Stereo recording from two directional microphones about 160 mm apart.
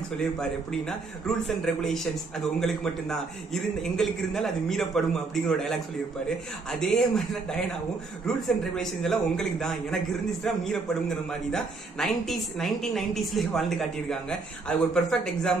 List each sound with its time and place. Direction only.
0.4 s a man's voice: 5° left (ahead or behind)